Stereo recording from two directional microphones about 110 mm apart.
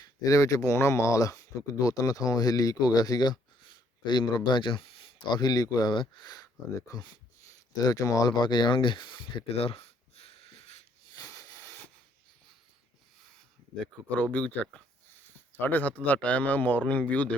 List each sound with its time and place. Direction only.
0.0 s speech: 35° left (ahead or behind); by 5.4 s 55° left (ahead or behind)
5.4 s speech: 35° left (ahead or behind); by 10.8 s 75° left (ahead or behind)
11.1 s wheeze: 35° left (ahead or behind)
14.3 s speech: 10° left (ahead or behind)